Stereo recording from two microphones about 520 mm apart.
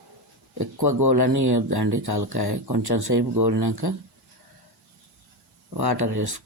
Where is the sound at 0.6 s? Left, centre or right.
Right.